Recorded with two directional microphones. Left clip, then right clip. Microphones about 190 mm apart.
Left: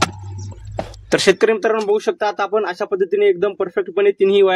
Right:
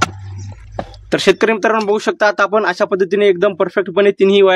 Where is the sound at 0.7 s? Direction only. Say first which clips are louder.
Even; 15° right (ahead or behind).